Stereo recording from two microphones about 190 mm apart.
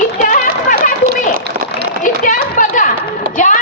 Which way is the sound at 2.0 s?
45° left (ahead or behind).